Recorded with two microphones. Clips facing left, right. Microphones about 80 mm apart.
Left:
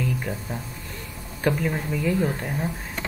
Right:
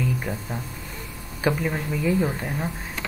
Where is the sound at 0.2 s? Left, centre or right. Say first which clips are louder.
Right 1 dB; centre.